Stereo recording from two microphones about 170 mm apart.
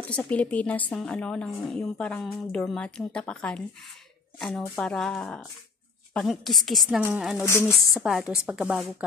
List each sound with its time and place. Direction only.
0.1 s a woman's voice: 10° left (ahead or behind)
7.4 s a woman's voice: 15° left (ahead or behind)
7.9 s a woman's voice: centre (ahead or behind)